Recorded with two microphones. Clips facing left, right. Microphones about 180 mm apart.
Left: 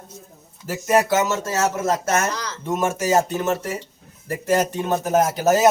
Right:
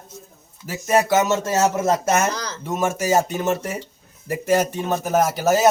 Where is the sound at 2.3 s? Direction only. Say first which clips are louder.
Right 1 dB; 35° right (ahead or behind).